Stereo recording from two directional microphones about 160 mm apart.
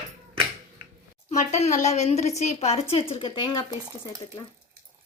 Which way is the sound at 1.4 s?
45° left (ahead or behind).